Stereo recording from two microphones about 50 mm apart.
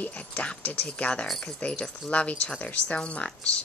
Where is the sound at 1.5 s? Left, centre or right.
Left.